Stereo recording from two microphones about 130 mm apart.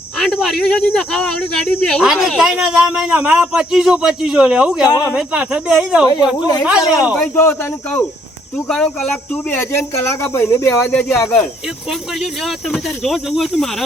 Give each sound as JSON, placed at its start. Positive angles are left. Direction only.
{"t": 0.2, "sound": "speech", "side_deg": 5}
{"t": 2.0, "sound": "speech", "side_deg": -5}
{"t": 6.3, "sound": "speech", "side_deg": 30}
{"t": 6.7, "sound": "speech", "side_deg": -5}
{"t": 7.3, "sound": "speech", "side_deg": 15}
{"t": 11.9, "sound": "speech", "side_deg": 0}